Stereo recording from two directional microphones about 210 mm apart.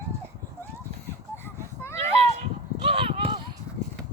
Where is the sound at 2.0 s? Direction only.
30° right (ahead or behind).